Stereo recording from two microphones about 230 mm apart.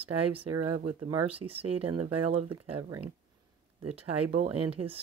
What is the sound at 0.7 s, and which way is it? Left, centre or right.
Speech, right.